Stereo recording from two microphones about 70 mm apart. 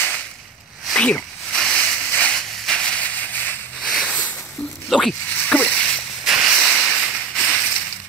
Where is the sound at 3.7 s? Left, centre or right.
Centre.